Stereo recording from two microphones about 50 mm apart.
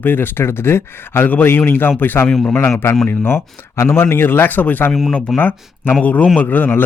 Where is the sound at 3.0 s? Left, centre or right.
Left.